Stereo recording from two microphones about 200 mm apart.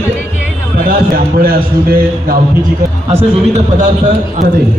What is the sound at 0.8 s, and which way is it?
A man's voice, 45° right (ahead or behind).